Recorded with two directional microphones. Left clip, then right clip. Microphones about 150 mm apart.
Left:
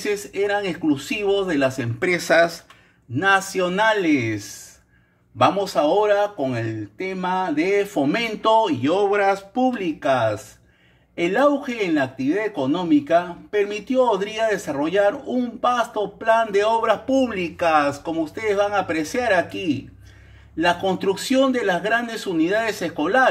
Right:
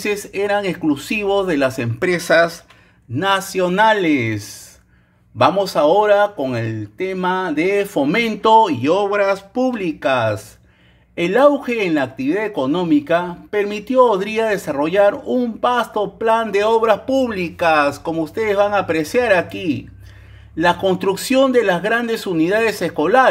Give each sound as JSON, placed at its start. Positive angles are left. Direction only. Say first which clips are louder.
{"t": 0.0, "sound": "speech", "louder": "right 3 dB", "side_deg": -40}
{"t": 2.0, "sound": "speech", "louder": "right 3 dB", "side_deg": -20}
{"t": 8.9, "sound": "speech", "louder": "even", "side_deg": -20}